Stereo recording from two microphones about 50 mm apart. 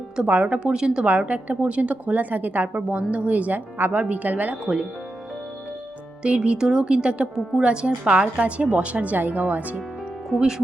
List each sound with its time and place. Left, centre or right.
0.4 s speech: right
1.0 s a woman's voice: right
4.6 s speech: centre
6.2 s a woman's voice: right
10.2 s speech: centre